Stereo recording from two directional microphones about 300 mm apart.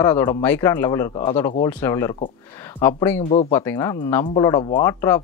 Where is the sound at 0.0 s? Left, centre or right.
Centre.